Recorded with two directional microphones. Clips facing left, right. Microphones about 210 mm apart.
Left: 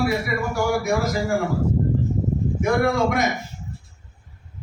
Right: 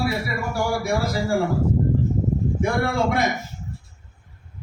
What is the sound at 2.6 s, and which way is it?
Speech, 30° right (ahead or behind).